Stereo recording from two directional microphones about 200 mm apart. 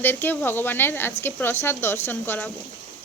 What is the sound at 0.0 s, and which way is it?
Speech, 10° left (ahead or behind).